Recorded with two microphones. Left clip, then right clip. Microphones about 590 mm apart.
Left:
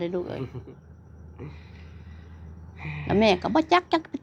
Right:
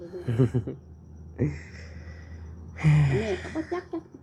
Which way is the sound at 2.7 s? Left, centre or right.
Right.